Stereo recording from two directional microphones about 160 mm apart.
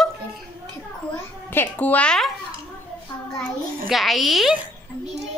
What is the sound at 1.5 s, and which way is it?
Speech, 10° left (ahead or behind).